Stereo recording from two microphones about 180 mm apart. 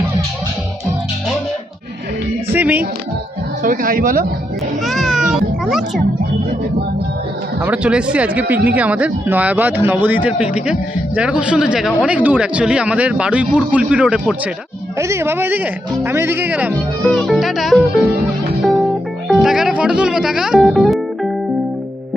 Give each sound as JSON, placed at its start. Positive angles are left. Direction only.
{"t": 2.5, "sound": "music", "side_deg": -10}
{"t": 3.6, "sound": "speech", "side_deg": -50}
{"t": 4.9, "sound": "a child's voice", "side_deg": 0}
{"t": 7.6, "sound": "speech", "side_deg": -5}
{"t": 17.0, "sound": "music", "side_deg": 5}
{"t": 19.3, "sound": "speech", "side_deg": 0}